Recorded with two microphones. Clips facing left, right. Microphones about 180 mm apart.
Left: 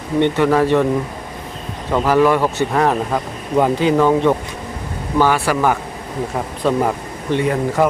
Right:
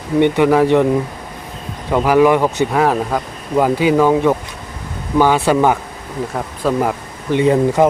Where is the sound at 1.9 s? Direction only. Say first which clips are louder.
Right 2 dB; 10° right (ahead or behind).